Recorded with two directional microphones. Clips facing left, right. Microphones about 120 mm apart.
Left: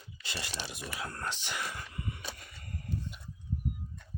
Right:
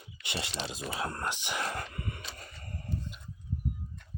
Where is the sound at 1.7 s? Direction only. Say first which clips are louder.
Right 4 dB; 60° right (ahead or behind).